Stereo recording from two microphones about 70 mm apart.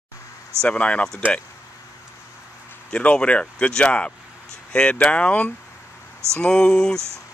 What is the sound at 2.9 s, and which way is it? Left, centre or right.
Speech, centre.